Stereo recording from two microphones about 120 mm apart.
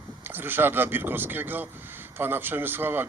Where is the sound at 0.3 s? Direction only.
15° right (ahead or behind).